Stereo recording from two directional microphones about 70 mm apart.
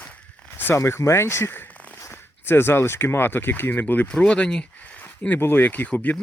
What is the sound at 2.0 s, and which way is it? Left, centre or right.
Speech, left.